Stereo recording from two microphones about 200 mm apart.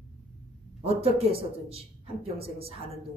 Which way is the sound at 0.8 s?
30° right (ahead or behind).